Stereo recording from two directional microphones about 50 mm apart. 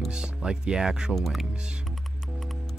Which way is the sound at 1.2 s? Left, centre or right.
Centre.